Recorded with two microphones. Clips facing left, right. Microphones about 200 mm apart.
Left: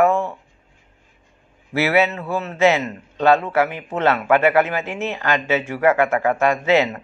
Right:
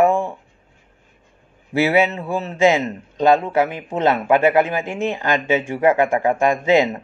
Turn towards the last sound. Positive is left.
turn(degrees=-15)  # may be behind; listen again after turning